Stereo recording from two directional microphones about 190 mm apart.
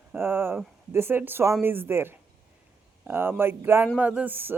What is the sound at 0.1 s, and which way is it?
Speech, 10° right (ahead or behind).